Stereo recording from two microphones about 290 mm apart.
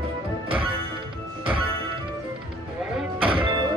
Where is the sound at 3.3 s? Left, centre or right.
Centre.